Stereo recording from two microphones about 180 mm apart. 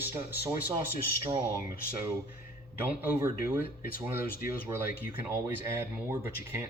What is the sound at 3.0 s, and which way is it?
Speech, 15° right (ahead or behind).